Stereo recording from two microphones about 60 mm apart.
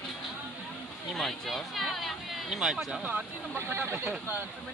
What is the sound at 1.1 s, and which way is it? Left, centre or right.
Speech, centre.